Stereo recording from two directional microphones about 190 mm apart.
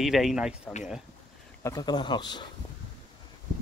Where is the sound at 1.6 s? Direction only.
20° left (ahead or behind).